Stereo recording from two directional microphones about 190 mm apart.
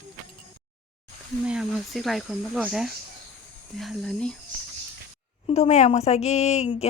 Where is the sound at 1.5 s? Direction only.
Centre (ahead or behind).